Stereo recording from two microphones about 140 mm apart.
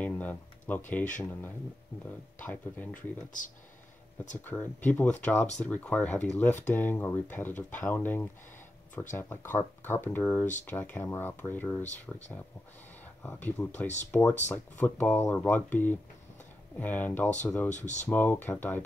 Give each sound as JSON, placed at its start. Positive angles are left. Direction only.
{"t": 0.0, "sound": "speech", "side_deg": 10}
{"t": 2.4, "sound": "speech", "side_deg": 10}
{"t": 4.5, "sound": "speech", "side_deg": 15}
{"t": 11.8, "sound": "speech", "side_deg": 55}
{"t": 13.0, "sound": "speech", "side_deg": 10}
{"t": 17.6, "sound": "speech", "side_deg": 60}
{"t": 18.0, "sound": "speech", "side_deg": 15}